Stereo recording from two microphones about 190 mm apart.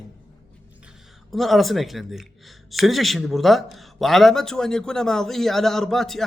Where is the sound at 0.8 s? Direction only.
Centre (ahead or behind).